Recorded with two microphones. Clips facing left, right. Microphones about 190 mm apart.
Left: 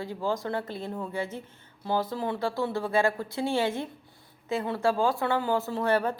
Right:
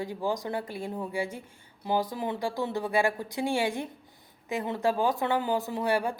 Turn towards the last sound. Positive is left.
turn(degrees=-10)  # may be behind; listen again after turning